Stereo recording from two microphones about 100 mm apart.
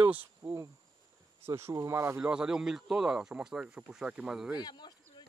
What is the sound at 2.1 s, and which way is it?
Speech, 10° right (ahead or behind).